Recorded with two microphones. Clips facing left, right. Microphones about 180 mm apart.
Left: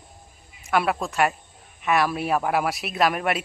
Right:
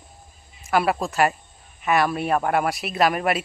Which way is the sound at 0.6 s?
Centre (ahead or behind).